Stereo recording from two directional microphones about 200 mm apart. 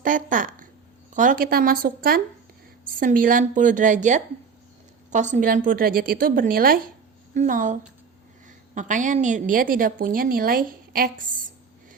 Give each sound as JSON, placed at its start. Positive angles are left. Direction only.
{"t": 0.0, "sound": "a woman's voice", "side_deg": -40}